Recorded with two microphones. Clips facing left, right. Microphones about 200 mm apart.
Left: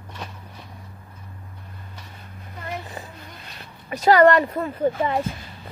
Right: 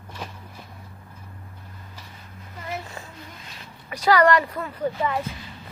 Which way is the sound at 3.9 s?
25° left (ahead or behind).